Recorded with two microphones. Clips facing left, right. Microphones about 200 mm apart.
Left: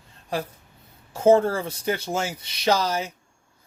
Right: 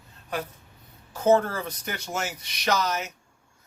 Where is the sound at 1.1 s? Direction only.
30° left (ahead or behind).